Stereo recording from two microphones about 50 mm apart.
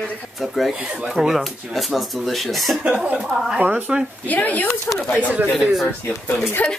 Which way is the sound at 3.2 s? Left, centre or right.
Centre.